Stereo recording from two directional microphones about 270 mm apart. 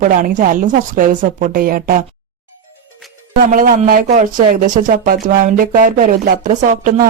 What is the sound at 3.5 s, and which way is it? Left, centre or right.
Speech, right.